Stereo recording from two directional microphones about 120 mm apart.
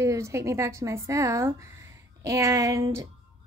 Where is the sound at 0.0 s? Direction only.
25° right (ahead or behind).